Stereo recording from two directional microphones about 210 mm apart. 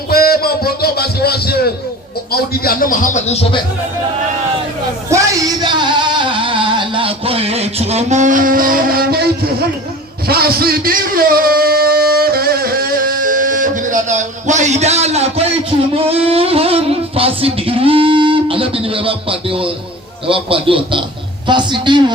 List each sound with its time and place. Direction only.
0.1 s a sound: 45° left (ahead or behind)
2.3 s a man's voice: 45° left (ahead or behind)
5.0 s music: 15° right (ahead or behind); by 9.6 s 50° right (ahead or behind)
10.2 s a sound: 45° right (ahead or behind); by 15.4 s 30° right (ahead or behind)
16.2 s music: 25° right (ahead or behind)
20.2 s speech: 25° right (ahead or behind)